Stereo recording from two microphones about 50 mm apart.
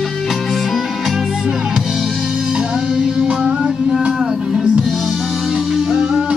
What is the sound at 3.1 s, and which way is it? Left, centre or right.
Music, centre.